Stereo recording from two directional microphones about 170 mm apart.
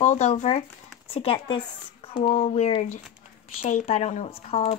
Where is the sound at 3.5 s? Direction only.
45° left (ahead or behind).